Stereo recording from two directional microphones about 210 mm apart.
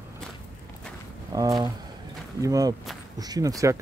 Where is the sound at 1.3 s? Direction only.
15° right (ahead or behind).